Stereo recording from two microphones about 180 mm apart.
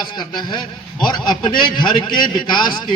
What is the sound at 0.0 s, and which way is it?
A man's voice, 25° left (ahead or behind).